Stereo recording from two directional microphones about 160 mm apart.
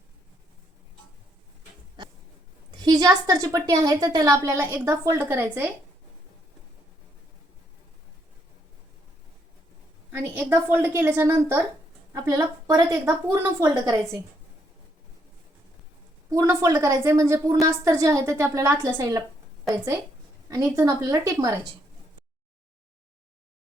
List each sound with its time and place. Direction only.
2.7 s a woman's voice: 25° right (ahead or behind)
10.1 s a woman's voice: 15° right (ahead or behind)
16.3 s a woman's voice: 20° right (ahead or behind)
20.5 s a woman's voice: 20° right (ahead or behind)